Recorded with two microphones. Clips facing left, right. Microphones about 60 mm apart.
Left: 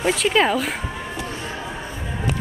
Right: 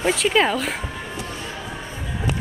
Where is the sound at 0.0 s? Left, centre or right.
Centre.